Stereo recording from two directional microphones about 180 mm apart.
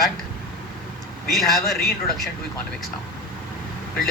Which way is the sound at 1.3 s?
Centre (ahead or behind).